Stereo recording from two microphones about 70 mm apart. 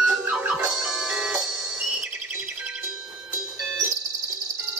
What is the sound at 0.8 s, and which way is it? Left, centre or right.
Music, centre.